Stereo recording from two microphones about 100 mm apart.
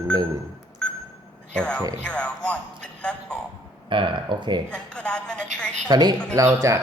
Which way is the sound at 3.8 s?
55° right (ahead or behind).